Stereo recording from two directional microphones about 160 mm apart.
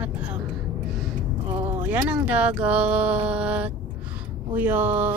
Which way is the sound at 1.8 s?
10° right (ahead or behind).